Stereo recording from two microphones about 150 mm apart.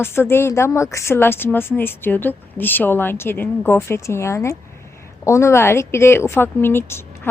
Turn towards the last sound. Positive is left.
turn(degrees=15)  # may be behind; listen again after turning